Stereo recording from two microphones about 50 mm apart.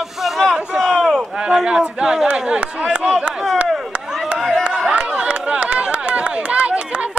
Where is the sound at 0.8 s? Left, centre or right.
Centre.